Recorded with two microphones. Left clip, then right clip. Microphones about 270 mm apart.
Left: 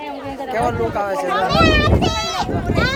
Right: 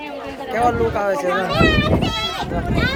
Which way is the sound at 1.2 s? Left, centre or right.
Centre.